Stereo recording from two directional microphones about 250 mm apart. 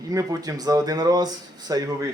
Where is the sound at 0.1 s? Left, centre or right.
Centre.